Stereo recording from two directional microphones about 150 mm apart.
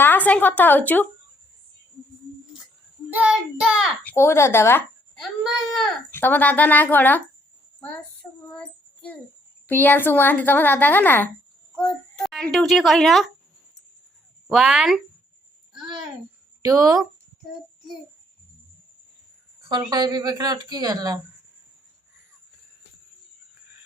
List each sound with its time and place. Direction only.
0.0 s speech: 10° left (ahead or behind)
3.1 s child singing: 10° right (ahead or behind)
4.0 s speech: 15° left (ahead or behind)
5.1 s speech: centre (ahead or behind)
6.1 s speech: 15° left (ahead or behind)
7.8 s child singing: 10° left (ahead or behind)
9.6 s speech: 15° left (ahead or behind)
11.8 s a child's voice: centre (ahead or behind)
14.4 s child singing: 5° right (ahead or behind)
16.6 s speech: 25° right (ahead or behind)
19.6 s speech: 30° right (ahead or behind)